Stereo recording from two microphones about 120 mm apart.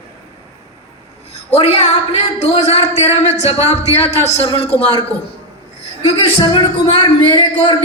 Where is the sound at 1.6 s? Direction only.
60° left (ahead or behind).